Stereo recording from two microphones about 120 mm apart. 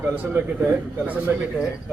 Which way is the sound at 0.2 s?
15° right (ahead or behind).